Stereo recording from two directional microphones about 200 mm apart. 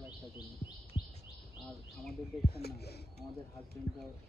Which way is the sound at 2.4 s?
50° left (ahead or behind).